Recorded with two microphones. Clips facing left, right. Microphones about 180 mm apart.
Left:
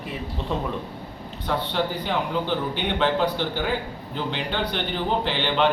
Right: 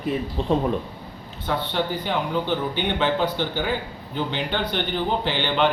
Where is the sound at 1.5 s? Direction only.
Centre (ahead or behind).